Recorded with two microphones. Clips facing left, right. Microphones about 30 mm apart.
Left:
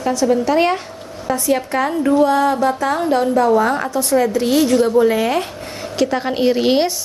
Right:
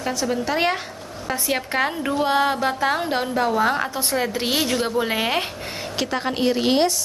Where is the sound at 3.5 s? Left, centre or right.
Centre.